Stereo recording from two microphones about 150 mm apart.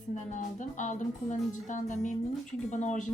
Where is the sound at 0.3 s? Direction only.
55° left (ahead or behind).